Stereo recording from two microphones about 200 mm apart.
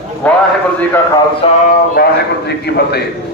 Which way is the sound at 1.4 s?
25° left (ahead or behind).